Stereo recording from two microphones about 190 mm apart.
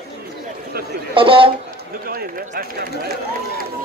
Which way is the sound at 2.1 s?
50° right (ahead or behind).